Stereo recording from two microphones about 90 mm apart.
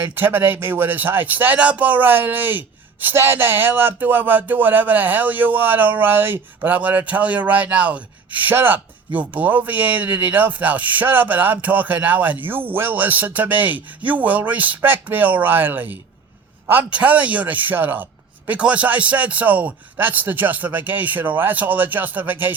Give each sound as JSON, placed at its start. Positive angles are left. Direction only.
{"t": 0.0, "sound": "speech", "side_deg": -20}